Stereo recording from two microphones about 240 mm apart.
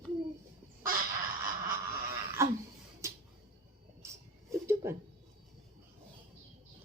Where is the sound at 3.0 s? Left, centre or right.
Centre.